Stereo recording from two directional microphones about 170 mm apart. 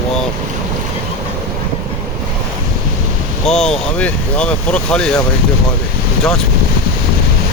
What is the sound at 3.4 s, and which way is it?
Speech, 5° left (ahead or behind).